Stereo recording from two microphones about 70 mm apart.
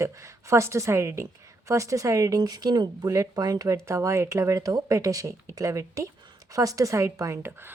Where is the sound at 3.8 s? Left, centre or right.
Right.